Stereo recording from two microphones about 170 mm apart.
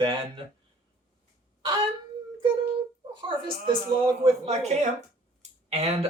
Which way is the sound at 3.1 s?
30° right (ahead or behind).